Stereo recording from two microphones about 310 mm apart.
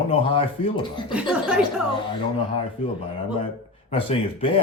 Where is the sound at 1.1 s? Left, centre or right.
Centre.